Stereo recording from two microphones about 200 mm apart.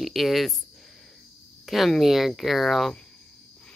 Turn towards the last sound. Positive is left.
turn(degrees=0)  # may be behind; listen again after turning